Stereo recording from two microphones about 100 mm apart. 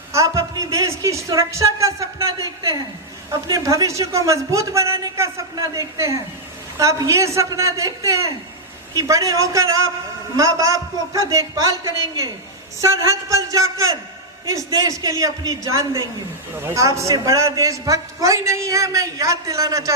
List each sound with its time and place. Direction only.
0.1 s a woman's voice: 30° right (ahead or behind)